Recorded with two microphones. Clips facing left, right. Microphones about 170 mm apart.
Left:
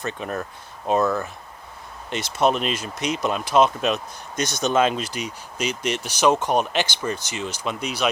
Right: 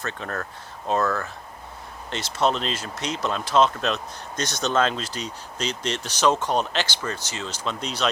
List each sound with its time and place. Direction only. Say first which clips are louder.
0.0 s speech: left 3 dB; 15° left (ahead or behind)